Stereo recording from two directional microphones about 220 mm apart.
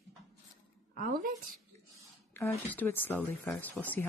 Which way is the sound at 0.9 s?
40° right (ahead or behind).